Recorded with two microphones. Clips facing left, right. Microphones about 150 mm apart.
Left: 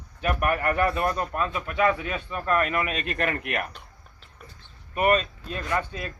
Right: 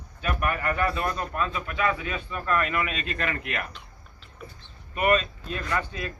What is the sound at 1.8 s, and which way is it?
Speech, 40° left (ahead or behind).